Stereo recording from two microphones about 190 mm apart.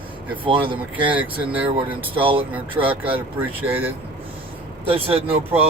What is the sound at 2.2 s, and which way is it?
Speech, 30° right (ahead or behind).